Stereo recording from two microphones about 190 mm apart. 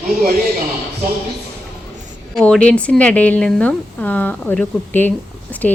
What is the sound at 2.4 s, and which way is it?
Speech, 5° left (ahead or behind).